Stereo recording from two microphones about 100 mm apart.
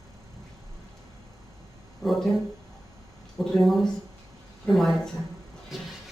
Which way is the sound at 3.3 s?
Centre (ahead or behind).